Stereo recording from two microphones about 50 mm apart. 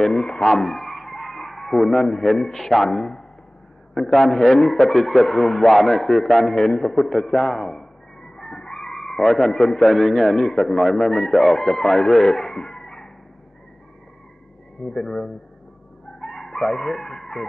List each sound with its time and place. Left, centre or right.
0.0 s a man's voice: centre
14.8 s speech: centre
16.2 s chicken: centre